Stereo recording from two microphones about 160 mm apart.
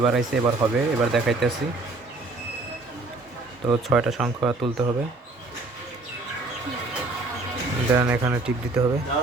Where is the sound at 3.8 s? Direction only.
5° right (ahead or behind).